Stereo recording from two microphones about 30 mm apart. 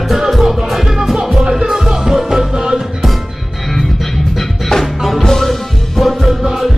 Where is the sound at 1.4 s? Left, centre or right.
Right.